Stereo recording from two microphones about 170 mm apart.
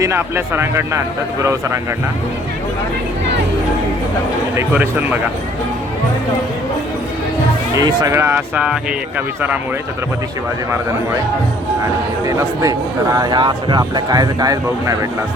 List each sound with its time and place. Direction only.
0.0 s speech: 15° right (ahead or behind)
4.5 s speech: 10° right (ahead or behind)
7.8 s speech: 20° right (ahead or behind)
12.2 s speech: 20° right (ahead or behind)